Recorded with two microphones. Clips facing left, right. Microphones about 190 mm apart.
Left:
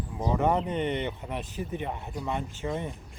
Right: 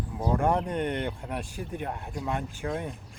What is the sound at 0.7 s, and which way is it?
Speech, 10° right (ahead or behind).